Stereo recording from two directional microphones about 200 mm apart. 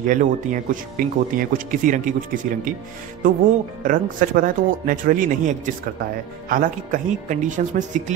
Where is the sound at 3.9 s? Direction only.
40° right (ahead or behind).